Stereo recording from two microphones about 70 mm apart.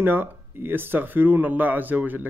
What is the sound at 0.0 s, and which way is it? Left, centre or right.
Speech, right.